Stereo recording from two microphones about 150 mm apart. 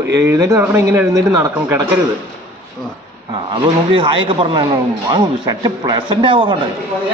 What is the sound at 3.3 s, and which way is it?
A man's voice, 30° right (ahead or behind).